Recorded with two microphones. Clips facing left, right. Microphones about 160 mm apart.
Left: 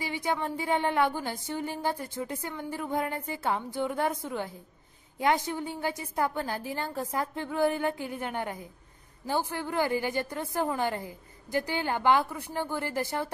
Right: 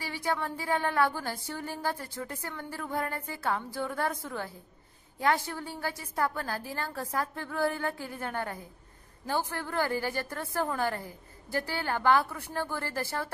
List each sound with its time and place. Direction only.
0.0 s a woman's voice: 15° left (ahead or behind)